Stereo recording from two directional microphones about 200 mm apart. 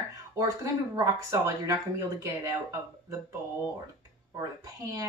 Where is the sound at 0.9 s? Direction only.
15° right (ahead or behind).